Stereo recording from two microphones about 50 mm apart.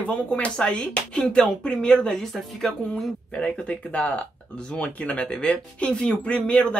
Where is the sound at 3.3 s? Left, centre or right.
Left.